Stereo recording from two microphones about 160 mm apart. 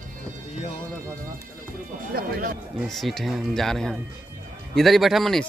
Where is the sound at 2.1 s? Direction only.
65° right (ahead or behind).